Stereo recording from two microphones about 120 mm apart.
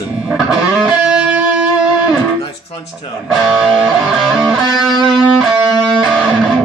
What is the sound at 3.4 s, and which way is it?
Music, centre (ahead or behind).